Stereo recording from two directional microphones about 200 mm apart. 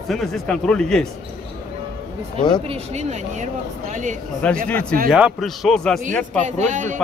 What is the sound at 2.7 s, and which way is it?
Speech, 35° right (ahead or behind).